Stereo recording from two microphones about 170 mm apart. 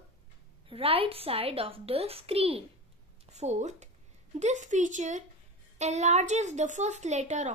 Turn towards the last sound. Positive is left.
turn(degrees=-45)  # may be behind; listen again after turning